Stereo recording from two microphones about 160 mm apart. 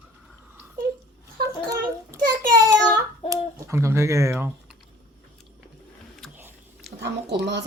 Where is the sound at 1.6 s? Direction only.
25° right (ahead or behind).